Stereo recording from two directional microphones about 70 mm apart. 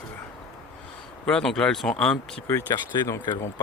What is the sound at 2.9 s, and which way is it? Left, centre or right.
Speech, left.